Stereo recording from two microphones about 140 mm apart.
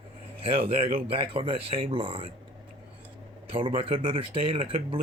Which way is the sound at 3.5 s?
40° right (ahead or behind).